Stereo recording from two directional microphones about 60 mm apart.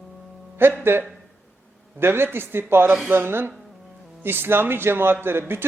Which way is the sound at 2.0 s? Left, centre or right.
Right.